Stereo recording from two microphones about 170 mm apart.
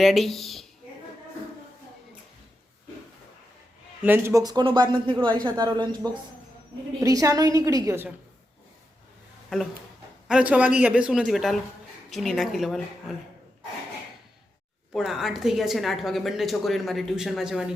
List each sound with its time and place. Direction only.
0.0 s a woman's voice: centre (ahead or behind)
4.0 s speech: 15° right (ahead or behind)
10.2 s a woman's voice: 5° right (ahead or behind)
14.9 s a woman's voice: 5° right (ahead or behind)